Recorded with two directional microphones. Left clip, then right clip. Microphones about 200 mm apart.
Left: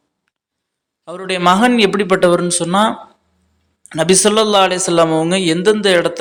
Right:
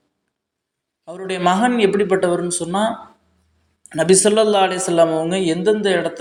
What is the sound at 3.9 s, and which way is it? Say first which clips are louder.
A man's voice: left 2 dB; 25° left (ahead or behind).